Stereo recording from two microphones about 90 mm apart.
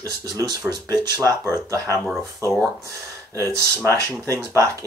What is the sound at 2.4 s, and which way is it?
Speech, 40° right (ahead or behind).